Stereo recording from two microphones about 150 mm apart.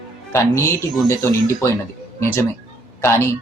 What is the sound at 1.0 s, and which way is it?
Speech, 20° left (ahead or behind).